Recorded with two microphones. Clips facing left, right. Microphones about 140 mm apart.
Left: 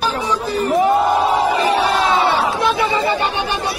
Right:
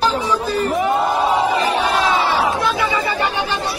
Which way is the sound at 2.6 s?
25° left (ahead or behind).